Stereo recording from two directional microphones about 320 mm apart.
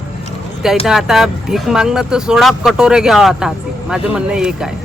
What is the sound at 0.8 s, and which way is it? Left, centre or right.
Speech, centre.